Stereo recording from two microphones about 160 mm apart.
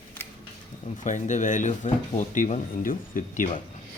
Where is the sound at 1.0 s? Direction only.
50° left (ahead or behind).